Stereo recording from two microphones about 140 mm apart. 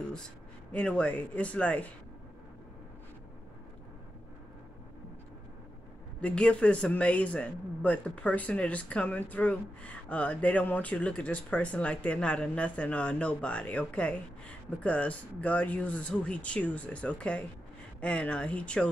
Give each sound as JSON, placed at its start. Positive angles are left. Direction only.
{"t": 0.7, "sound": "a man's voice", "side_deg": 10}
{"t": 6.2, "sound": "a man's voice", "side_deg": 10}